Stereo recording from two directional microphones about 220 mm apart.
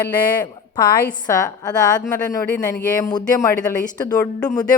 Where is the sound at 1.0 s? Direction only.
15° left (ahead or behind).